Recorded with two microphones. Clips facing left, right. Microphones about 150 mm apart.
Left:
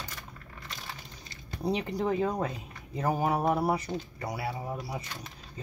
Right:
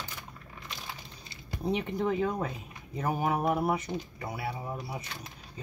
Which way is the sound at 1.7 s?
35° left (ahead or behind).